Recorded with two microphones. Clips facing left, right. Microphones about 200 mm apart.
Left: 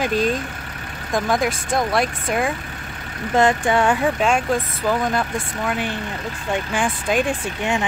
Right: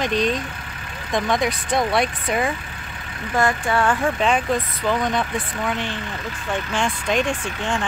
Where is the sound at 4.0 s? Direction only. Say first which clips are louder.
Left 1 dB; centre (ahead or behind).